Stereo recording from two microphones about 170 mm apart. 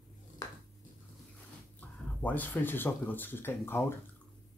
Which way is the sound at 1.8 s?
10° left (ahead or behind).